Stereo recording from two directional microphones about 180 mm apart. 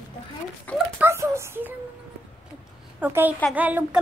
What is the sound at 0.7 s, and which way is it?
Speech, 10° left (ahead or behind).